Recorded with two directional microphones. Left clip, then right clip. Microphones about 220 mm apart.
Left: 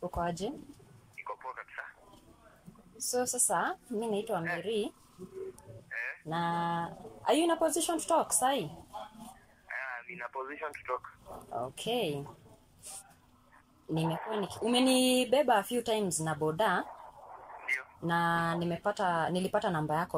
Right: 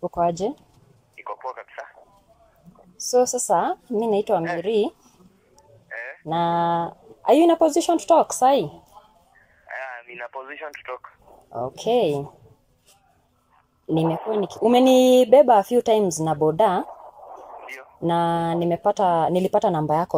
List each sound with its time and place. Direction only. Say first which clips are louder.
0.1 s speech: right 15 dB; 15° right (ahead or behind)
1.2 s telephone: right 9 dB; 30° right (ahead or behind)
3.1 s speech: right 13 dB; 15° right (ahead or behind)
4.4 s a woman's voice: right 11 dB; 25° right (ahead or behind)
5.9 s duck: right 4 dB; 30° right (ahead or behind)
6.2 s speech: right 13 dB; 15° right (ahead or behind)
9.7 s speech: right 6 dB; 30° right (ahead or behind)
11.5 s speech: right 12 dB; 15° right (ahead or behind)
13.8 s speech: right 12 dB; 15° right (ahead or behind)